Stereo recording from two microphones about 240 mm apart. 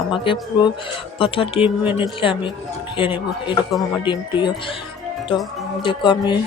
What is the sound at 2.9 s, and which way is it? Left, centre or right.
Speech, left.